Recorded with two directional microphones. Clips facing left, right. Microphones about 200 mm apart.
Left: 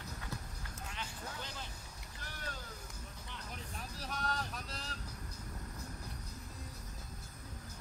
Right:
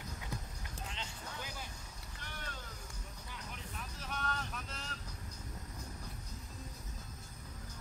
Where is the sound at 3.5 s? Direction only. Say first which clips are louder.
Left 1 dB; 40° left (ahead or behind).